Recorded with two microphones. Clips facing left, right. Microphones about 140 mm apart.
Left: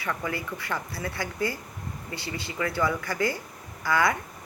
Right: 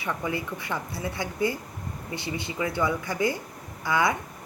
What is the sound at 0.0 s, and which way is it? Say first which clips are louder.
Speech: right 1 dB; 20° right (ahead or behind).